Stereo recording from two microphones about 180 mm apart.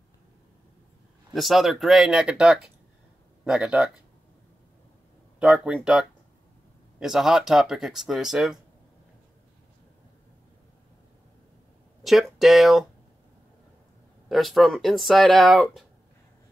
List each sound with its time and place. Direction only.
1.3 s speech: centre (ahead or behind)
5.4 s speech: 5° right (ahead or behind)
12.0 s speech: centre (ahead or behind)
14.3 s speech: centre (ahead or behind)